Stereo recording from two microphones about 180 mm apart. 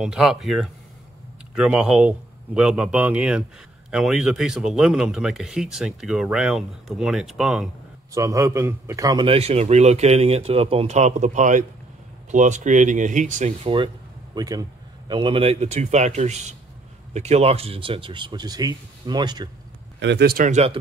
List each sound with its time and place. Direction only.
0.0 s speech: centre (ahead or behind)
8.1 s a man's voice: 15° right (ahead or behind); by 13.7 s 40° right (ahead or behind)
14.3 s a man's voice: 20° right (ahead or behind)
20.0 s speech: 70° right (ahead or behind); by 20.6 s 50° right (ahead or behind)